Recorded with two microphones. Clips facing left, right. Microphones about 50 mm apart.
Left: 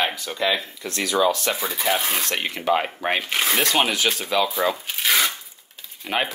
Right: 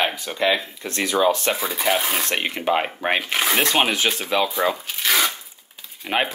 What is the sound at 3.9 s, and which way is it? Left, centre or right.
Speech, right.